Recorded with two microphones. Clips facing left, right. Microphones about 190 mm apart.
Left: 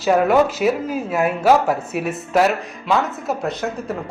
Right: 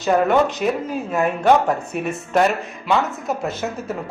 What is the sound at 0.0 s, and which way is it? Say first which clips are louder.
A man's voice: left 1 dB; 5° left (ahead or behind).